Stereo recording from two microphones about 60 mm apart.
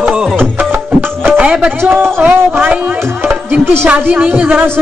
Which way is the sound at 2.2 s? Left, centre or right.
Right.